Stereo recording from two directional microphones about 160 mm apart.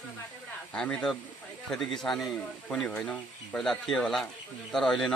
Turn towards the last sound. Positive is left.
turn(degrees=5)  # may be behind; listen again after turning